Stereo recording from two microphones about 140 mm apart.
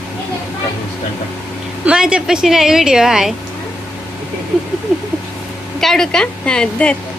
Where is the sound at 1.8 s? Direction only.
5° right (ahead or behind).